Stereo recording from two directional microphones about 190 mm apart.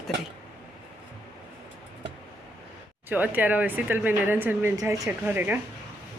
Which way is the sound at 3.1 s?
10° right (ahead or behind).